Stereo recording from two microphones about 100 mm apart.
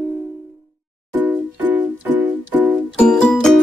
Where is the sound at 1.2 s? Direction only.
20° right (ahead or behind).